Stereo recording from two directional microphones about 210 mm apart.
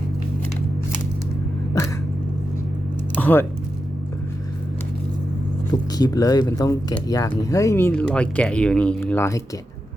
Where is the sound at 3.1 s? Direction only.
10° left (ahead or behind).